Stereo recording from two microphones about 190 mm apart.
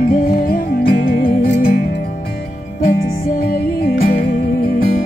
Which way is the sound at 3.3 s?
55° left (ahead or behind).